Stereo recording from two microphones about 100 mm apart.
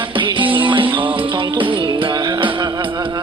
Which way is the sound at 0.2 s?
55° right (ahead or behind).